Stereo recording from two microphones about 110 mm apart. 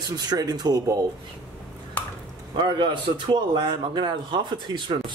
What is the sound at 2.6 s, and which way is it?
A man's voice, 45° right (ahead or behind).